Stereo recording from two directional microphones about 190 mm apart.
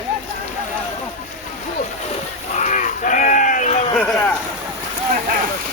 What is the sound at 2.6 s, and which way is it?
Sheep, 40° left (ahead or behind).